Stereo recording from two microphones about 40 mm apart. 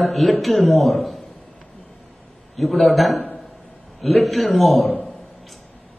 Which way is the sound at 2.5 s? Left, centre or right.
Centre.